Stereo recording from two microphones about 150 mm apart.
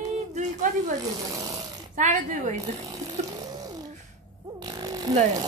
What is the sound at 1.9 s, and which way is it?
Speech, 55° right (ahead or behind).